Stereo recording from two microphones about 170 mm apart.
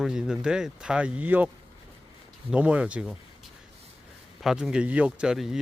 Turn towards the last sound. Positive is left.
turn(degrees=0)  # may be behind; listen again after turning